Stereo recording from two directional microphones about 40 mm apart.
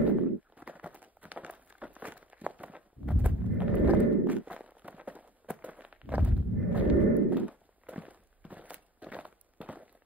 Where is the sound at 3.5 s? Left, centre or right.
Right.